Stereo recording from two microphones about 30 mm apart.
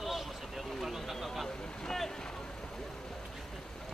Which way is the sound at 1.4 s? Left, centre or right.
Left.